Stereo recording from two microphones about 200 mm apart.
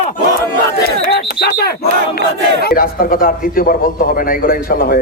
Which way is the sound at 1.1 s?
50° left (ahead or behind).